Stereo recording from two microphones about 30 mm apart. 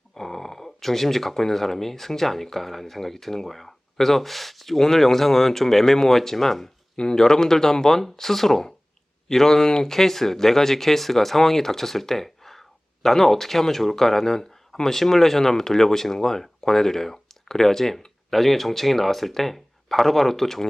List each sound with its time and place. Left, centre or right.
0.2 s speech: centre
6.9 s speech: left